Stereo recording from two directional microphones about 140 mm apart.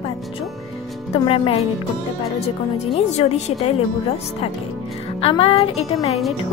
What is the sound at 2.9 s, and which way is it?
Speech, 50° left (ahead or behind).